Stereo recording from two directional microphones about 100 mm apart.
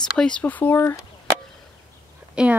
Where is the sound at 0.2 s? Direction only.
10° left (ahead or behind).